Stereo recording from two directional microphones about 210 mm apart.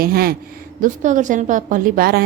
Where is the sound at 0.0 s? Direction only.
45° right (ahead or behind).